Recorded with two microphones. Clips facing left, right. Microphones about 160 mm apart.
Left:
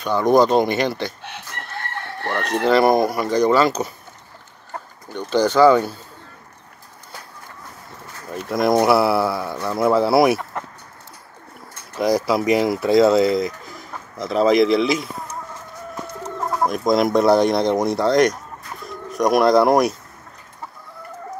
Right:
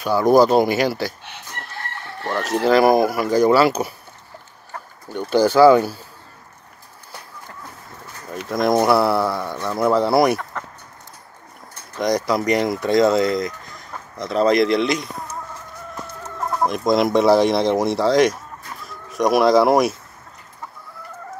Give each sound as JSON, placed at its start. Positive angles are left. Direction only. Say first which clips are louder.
{"t": 0.0, "sound": "speech", "louder": "right 1 dB", "side_deg": -5}
{"t": 2.2, "sound": "speech", "louder": "right 1 dB", "side_deg": 0}
{"t": 5.1, "sound": "speech", "louder": "right 2 dB", "side_deg": -10}
{"t": 8.5, "sound": "speech", "louder": "left 1 dB", "side_deg": 0}
{"t": 12.0, "sound": "speech", "louder": "left 1 dB", "side_deg": 5}
{"t": 16.4, "sound": "speech", "louder": "even", "side_deg": 0}